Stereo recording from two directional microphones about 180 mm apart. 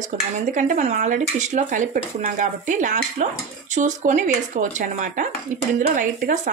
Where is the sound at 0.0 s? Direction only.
45° right (ahead or behind).